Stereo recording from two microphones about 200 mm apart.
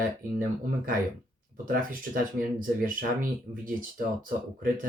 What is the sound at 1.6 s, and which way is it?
Speech, 45° right (ahead or behind).